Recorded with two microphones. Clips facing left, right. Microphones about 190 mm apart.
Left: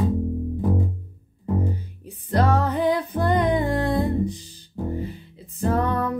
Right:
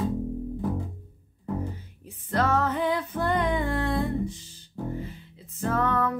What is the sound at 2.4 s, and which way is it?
Music, 35° left (ahead or behind).